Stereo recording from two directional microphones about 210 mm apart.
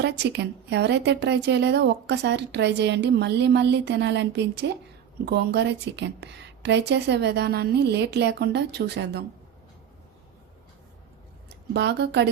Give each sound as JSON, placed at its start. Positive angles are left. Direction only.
{"t": 0.0, "sound": "a woman's voice", "side_deg": -55}
{"t": 11.7, "sound": "a woman's voice", "side_deg": -55}